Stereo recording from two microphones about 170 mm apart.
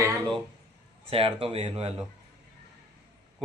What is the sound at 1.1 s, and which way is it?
Speech, 35° right (ahead or behind).